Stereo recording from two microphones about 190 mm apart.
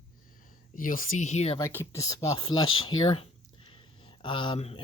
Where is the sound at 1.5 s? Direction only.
15° left (ahead or behind).